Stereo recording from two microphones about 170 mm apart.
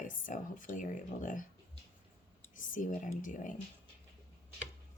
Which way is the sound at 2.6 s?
50° left (ahead or behind).